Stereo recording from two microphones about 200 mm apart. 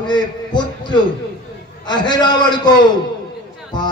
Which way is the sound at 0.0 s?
20° left (ahead or behind).